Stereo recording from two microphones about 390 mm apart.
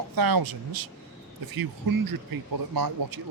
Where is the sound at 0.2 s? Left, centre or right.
Right.